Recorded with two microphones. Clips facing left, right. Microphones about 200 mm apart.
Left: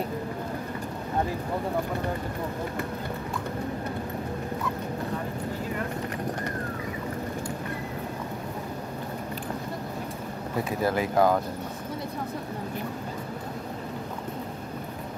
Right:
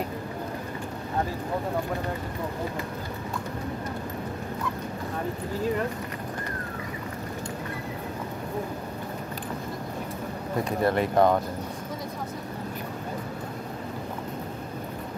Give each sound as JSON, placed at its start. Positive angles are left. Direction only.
{"t": 10.6, "sound": "speech", "side_deg": 0}